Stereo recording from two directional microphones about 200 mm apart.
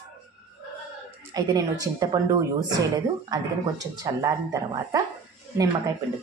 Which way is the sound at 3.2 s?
20° right (ahead or behind).